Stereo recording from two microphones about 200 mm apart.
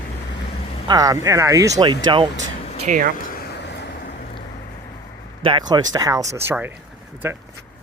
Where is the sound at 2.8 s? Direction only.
40° right (ahead or behind).